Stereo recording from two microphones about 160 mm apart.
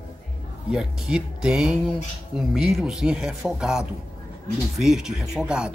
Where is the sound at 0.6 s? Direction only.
5° right (ahead or behind).